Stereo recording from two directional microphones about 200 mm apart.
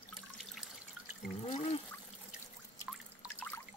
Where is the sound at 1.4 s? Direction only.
30° left (ahead or behind).